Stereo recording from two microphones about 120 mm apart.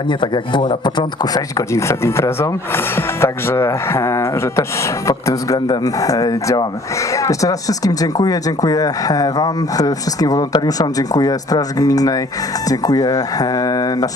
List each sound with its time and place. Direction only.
0.1 s speech: 40° left (ahead or behind)